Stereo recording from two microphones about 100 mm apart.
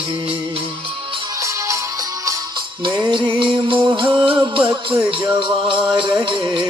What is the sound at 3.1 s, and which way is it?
Music, 50° right (ahead or behind).